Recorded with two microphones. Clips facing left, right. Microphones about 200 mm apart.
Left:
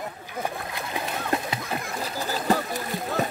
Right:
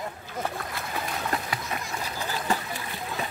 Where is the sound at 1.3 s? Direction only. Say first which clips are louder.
Left 3 dB; 25° left (ahead or behind).